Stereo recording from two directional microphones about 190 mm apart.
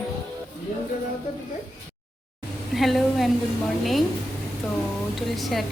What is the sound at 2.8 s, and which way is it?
Speech, centre (ahead or behind).